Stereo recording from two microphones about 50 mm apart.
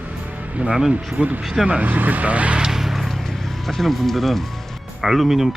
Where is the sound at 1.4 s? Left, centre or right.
Centre.